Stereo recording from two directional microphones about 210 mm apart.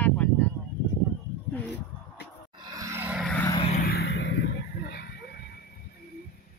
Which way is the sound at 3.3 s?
10° left (ahead or behind).